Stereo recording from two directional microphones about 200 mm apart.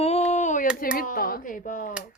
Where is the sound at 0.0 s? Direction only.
35° left (ahead or behind).